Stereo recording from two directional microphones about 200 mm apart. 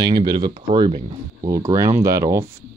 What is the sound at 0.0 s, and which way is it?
Speech, 20° right (ahead or behind).